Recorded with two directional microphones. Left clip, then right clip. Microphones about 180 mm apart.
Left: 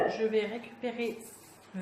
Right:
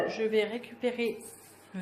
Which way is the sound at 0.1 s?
50° right (ahead or behind).